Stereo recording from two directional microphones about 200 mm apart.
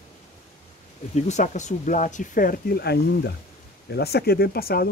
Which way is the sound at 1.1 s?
35° left (ahead or behind).